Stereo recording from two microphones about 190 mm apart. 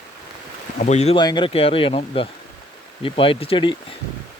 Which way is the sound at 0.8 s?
35° left (ahead or behind).